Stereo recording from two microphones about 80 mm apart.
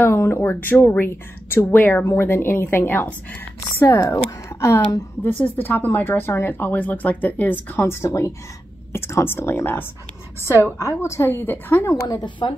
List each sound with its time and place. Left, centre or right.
0.0 s speech: left
4.0 s a woman's voice: left
5.2 s a woman's voice: left
11.9 s a woman's voice: left